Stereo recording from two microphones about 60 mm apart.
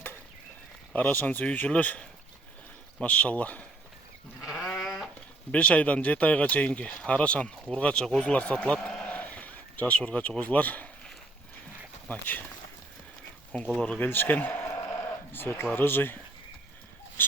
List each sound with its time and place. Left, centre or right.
0.9 s speech: left
4.8 s a sound: centre
5.5 s a man's voice: left
12.0 s speech: left
13.5 s speech: left
14.0 s speech: left
14.6 s sheep: left
15.3 s speech: left